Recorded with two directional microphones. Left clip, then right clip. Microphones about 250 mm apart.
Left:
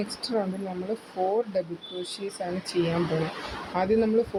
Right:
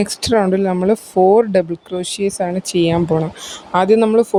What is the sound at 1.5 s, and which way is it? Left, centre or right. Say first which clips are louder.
Speech: right 13 dB; right.